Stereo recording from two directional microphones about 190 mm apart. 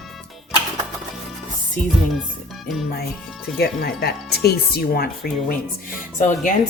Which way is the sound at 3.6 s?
55° left (ahead or behind).